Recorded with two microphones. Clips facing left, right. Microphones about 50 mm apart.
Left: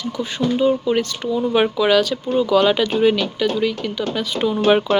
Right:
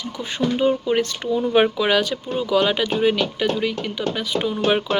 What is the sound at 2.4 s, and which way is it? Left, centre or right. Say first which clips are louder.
Speech: left 4 dB; centre.